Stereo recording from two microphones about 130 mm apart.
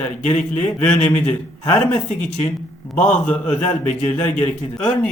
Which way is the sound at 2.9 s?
10° left (ahead or behind).